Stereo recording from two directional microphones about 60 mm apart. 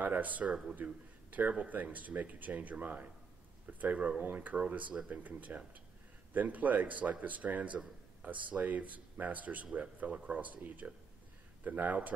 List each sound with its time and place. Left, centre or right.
0.0 s a man's voice: right